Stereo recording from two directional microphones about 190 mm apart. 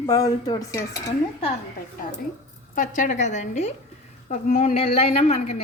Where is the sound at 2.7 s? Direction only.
40° left (ahead or behind).